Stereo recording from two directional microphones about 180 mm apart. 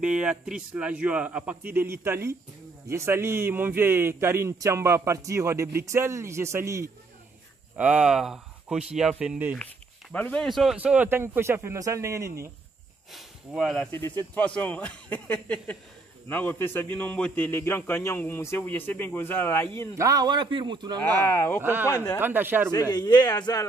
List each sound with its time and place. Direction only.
0.0 s a man's voice: 5° right (ahead or behind)
10.1 s a man's voice: 10° left (ahead or behind); by 12.4 s 15° right (ahead or behind)
13.1 s speech: centre (ahead or behind)
13.9 s a man's voice: 10° left (ahead or behind)
20.0 s a man's voice: 20° right (ahead or behind)
21.2 s a man's voice: 10° left (ahead or behind)
22.2 s a man's voice: 10° right (ahead or behind)
22.7 s a man's voice: 25° left (ahead or behind)